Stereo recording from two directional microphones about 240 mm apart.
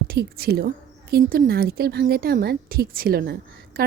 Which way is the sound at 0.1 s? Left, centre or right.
Right.